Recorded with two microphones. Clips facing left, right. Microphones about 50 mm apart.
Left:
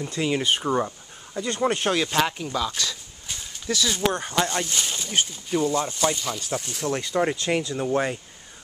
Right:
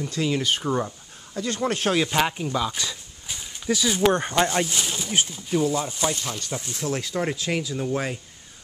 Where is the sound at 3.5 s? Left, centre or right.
Centre.